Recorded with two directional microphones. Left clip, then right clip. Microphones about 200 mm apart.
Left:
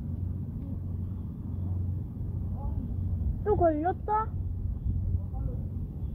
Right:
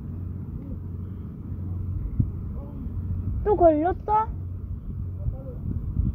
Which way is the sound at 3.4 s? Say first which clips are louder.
Right 7 dB; 55° right (ahead or behind).